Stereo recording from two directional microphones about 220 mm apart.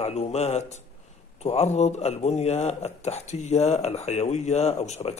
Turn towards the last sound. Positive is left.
turn(degrees=30)  # may be behind; listen again after turning